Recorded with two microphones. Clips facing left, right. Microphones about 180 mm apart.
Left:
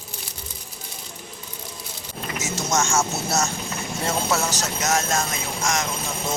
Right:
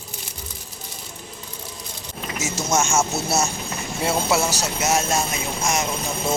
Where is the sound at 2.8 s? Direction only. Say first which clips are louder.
Right 1 dB; 20° right (ahead or behind).